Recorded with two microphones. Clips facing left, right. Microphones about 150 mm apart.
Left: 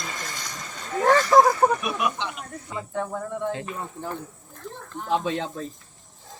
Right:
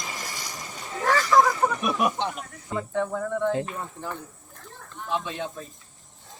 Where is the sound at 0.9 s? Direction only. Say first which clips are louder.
Left 5 dB; 45° left (ahead or behind).